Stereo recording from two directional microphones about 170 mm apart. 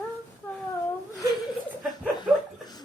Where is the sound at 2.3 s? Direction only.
5° right (ahead or behind).